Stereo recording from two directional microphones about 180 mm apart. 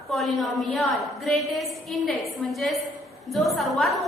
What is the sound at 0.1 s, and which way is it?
A woman's voice, centre (ahead or behind).